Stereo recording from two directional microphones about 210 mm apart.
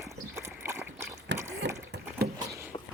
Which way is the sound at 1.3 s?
55° right (ahead or behind).